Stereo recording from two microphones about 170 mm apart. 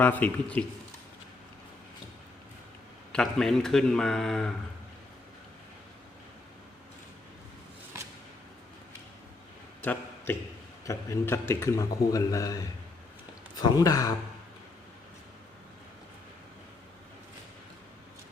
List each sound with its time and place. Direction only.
0.0 s speech: 10° left (ahead or behind)
3.1 s a man's voice: 5° left (ahead or behind)
9.8 s a sound: 10° left (ahead or behind)
10.8 s a man's voice: 15° left (ahead or behind)
13.6 s a man's voice: 20° left (ahead or behind)